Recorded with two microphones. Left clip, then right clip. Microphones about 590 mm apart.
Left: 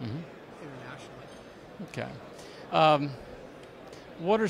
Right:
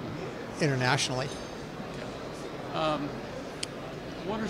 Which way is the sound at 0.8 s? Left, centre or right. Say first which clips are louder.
Right 17 dB; right.